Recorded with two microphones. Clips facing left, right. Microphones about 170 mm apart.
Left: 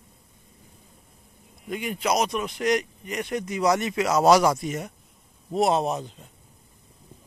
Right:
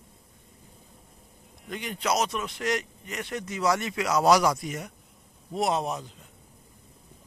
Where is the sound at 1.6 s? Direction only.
10° left (ahead or behind); by 6.1 s 25° left (ahead or behind).